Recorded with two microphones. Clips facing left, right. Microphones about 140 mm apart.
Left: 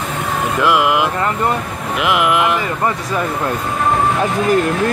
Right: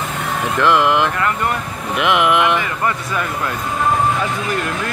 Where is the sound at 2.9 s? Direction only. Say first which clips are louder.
Left 2 dB; 30° left (ahead or behind).